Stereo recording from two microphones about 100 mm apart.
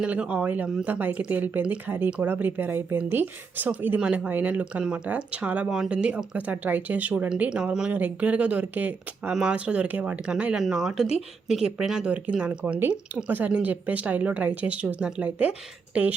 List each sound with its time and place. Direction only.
0.0 s speech: 15° right (ahead or behind)